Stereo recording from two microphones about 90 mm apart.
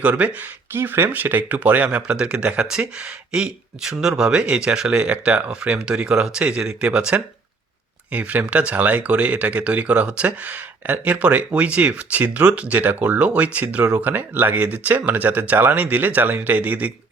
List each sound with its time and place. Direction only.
0.0 s speech: 15° right (ahead or behind)